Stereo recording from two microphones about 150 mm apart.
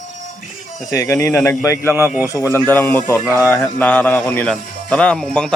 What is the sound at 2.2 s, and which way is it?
Speech, 20° left (ahead or behind).